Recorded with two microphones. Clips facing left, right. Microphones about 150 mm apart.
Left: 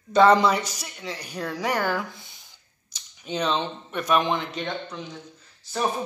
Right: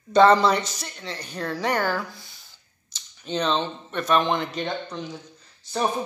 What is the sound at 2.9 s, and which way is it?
Speech, 10° left (ahead or behind).